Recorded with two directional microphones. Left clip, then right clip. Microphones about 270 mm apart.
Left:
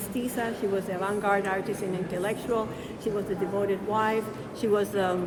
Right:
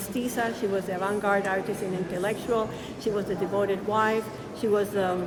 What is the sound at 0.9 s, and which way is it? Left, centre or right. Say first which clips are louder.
A woman's voice: right 1 dB; centre.